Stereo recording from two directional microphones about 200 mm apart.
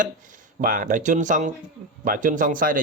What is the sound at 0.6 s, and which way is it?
A man's voice, 40° right (ahead or behind).